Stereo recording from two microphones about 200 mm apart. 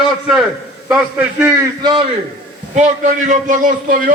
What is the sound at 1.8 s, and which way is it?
Speech, 20° right (ahead or behind).